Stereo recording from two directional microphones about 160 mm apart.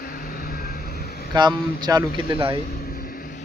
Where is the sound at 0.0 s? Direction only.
65° left (ahead or behind).